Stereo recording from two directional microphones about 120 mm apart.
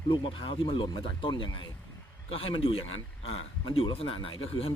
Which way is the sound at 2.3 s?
50° left (ahead or behind).